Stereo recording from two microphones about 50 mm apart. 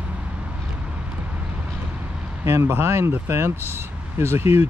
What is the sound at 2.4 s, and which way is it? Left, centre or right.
Speech, right.